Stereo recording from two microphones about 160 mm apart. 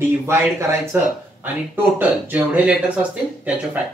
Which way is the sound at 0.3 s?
15° right (ahead or behind).